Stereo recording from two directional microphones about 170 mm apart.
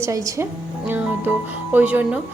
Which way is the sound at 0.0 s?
20° right (ahead or behind).